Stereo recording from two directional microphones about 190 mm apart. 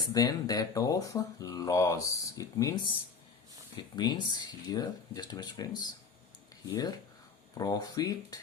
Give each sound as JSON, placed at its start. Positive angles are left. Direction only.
{"t": 0.1, "sound": "speech", "side_deg": 20}
{"t": 7.5, "sound": "speech", "side_deg": 20}